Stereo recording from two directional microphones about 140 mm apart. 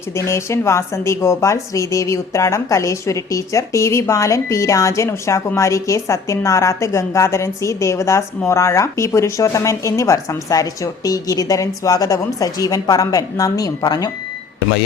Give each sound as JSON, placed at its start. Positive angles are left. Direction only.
{"t": 0.3, "sound": "speech", "side_deg": 20}